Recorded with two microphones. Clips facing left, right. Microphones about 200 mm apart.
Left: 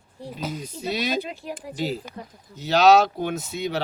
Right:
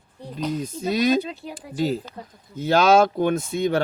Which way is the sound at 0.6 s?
45° right (ahead or behind).